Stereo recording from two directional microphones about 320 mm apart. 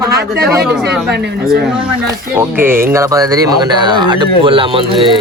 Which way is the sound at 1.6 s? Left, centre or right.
Centre.